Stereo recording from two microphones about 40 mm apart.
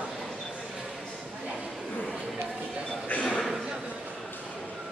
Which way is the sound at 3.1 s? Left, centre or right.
Left.